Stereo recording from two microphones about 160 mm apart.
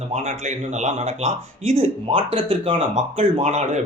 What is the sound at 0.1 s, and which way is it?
Speech, 45° right (ahead or behind).